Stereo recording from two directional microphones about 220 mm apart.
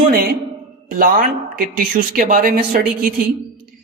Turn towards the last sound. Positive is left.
turn(degrees=-40)  # may be behind; listen again after turning